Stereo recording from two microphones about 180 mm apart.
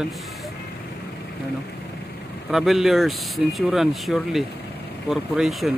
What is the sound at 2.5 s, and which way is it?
Speech, centre (ahead or behind).